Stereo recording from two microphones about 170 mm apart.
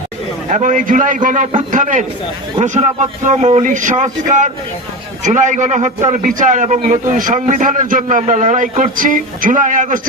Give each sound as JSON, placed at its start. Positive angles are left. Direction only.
{"t": 0.5, "sound": "a man's voice", "side_deg": -50}